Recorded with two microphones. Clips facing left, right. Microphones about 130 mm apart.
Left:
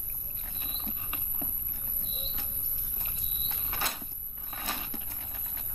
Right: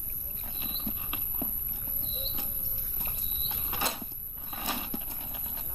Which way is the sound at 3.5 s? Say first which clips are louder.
Right 3 dB; 15° right (ahead or behind).